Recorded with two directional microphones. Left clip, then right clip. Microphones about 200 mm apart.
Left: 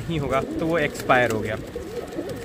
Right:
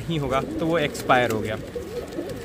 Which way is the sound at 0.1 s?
10° right (ahead or behind).